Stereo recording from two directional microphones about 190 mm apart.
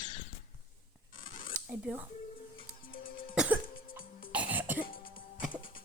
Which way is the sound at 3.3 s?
5° right (ahead or behind).